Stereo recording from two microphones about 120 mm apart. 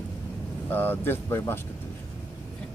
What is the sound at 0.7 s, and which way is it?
Speech, 15° left (ahead or behind).